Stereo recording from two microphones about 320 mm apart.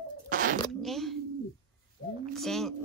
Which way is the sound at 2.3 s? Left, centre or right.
Centre.